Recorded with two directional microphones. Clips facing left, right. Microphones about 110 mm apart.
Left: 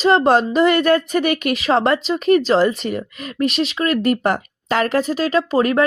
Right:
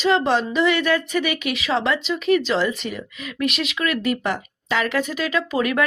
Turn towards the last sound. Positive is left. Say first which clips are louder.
# left 5 dB
turn(degrees=35)  # may be behind; listen again after turning